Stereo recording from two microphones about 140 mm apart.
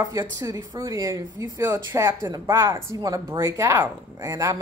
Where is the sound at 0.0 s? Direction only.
25° right (ahead or behind).